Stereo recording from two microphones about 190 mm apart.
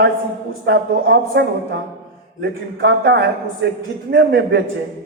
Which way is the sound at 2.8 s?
60° right (ahead or behind).